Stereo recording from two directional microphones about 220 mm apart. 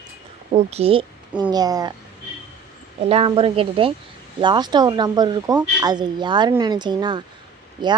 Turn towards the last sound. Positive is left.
turn(degrees=-20)  # may be behind; listen again after turning